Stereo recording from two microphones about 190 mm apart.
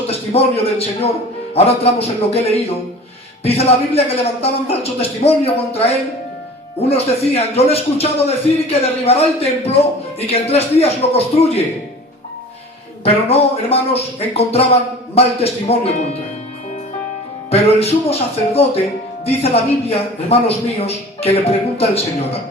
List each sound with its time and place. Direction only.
0.1 s a man's voice: 30° left (ahead or behind)
13.1 s a man's voice: 30° left (ahead or behind)
17.5 s a man's voice: 30° left (ahead or behind)